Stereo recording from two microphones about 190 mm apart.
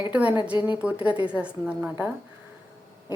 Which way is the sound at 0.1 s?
5° right (ahead or behind).